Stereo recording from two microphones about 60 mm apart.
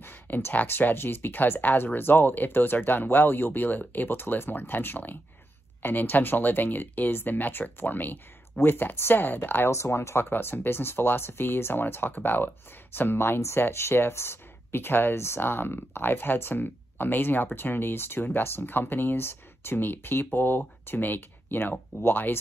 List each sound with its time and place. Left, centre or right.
0.0 s speech: left
9.7 s speech: left
10.3 s speech: left